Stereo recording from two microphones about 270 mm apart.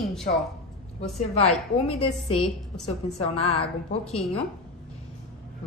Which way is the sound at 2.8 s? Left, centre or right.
Left.